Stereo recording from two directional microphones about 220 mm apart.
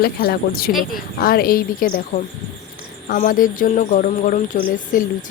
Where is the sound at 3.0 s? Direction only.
40° left (ahead or behind).